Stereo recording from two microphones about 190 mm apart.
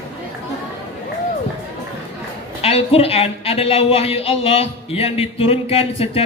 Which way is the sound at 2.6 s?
30° left (ahead or behind).